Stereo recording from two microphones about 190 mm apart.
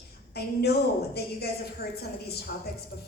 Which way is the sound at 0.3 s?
55° left (ahead or behind).